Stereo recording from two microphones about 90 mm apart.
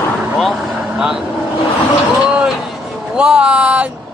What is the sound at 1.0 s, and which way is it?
Speech, 10° right (ahead or behind).